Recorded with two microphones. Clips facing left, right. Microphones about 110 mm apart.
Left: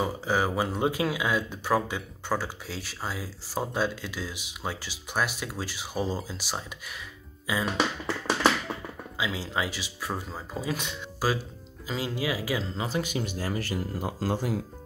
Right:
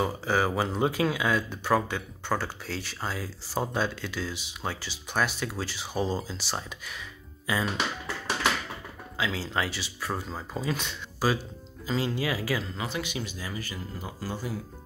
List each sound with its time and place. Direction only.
0.0 s speech: 5° left (ahead or behind)
8.3 s a sound: 35° left (ahead or behind)
9.2 s speech: 10° left (ahead or behind)
12.8 s speech: 40° left (ahead or behind); by 14.6 s 90° left